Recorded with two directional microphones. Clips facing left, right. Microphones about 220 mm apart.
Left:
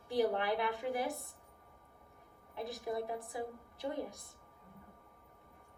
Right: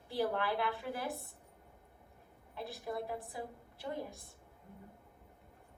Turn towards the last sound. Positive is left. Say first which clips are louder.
# left 2 dB
turn(degrees=20)  # may be behind; listen again after turning